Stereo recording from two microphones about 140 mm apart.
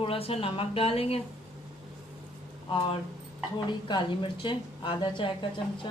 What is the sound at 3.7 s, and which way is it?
A woman's voice, 35° left (ahead or behind).